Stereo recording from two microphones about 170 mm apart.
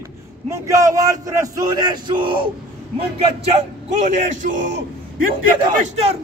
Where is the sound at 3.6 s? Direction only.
45° right (ahead or behind).